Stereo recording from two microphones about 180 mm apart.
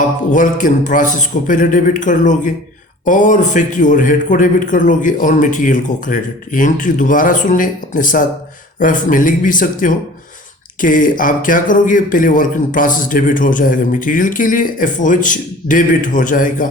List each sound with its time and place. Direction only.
0.3 s speech: 45° left (ahead or behind)